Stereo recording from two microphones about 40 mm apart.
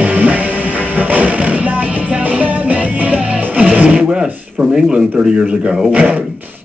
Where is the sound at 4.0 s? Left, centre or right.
Right.